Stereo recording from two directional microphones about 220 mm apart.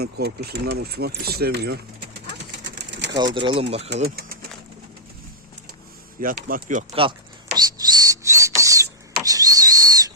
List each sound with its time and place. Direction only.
0.0 s speech: 45° right (ahead or behind)
2.6 s pigeon: 50° right (ahead or behind)
3.3 s speech: 25° right (ahead or behind)
4.0 s speech: 45° right (ahead or behind)
6.1 s speech: 40° right (ahead or behind)
7.5 s a sound: 15° right (ahead or behind)